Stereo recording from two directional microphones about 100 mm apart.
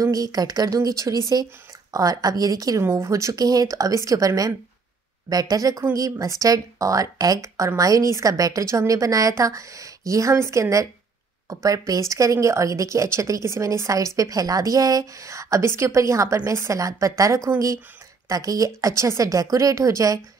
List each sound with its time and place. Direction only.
0.0 s a woman's voice: 35° right (ahead or behind)